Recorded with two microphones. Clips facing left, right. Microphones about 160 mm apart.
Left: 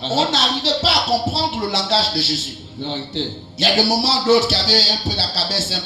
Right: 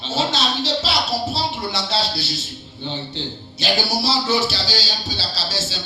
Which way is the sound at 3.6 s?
75° left (ahead or behind).